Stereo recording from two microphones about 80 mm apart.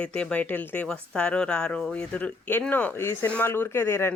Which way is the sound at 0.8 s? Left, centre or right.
Centre.